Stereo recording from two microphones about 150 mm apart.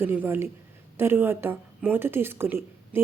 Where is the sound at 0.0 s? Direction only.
15° right (ahead or behind).